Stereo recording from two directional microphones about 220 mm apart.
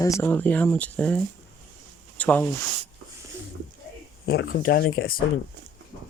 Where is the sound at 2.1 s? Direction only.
5° left (ahead or behind).